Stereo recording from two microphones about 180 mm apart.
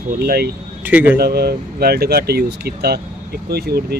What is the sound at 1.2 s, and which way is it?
Speech, 60° right (ahead or behind).